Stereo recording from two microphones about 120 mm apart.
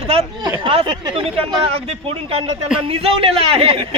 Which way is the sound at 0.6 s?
45° right (ahead or behind).